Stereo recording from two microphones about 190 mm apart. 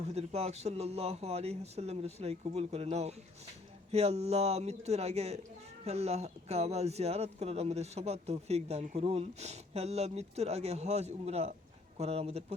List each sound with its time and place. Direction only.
0.0 s speech: 35° right (ahead or behind)